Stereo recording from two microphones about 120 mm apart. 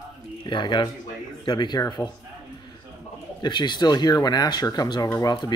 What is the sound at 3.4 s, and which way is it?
Speech, 40° left (ahead or behind).